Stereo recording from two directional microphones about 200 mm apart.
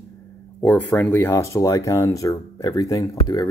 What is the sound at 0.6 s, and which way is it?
Speech, 10° left (ahead or behind).